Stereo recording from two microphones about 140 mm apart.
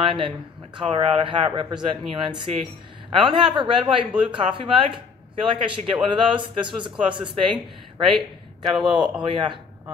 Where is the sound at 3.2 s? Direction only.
35° right (ahead or behind).